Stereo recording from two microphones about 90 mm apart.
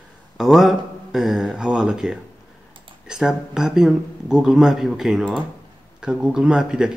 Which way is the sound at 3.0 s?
5° right (ahead or behind).